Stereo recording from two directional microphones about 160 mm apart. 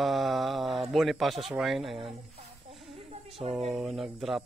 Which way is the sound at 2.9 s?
35° right (ahead or behind).